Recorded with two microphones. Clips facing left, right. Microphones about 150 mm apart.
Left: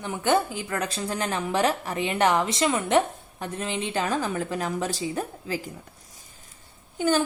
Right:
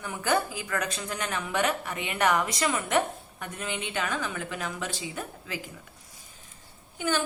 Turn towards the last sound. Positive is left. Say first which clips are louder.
# left 6 dB
turn(degrees=35)  # may be behind; listen again after turning